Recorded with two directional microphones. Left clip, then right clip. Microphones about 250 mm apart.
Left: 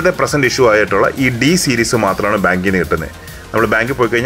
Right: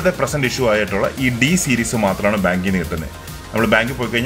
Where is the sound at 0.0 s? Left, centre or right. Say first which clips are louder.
Left 5 dB; centre.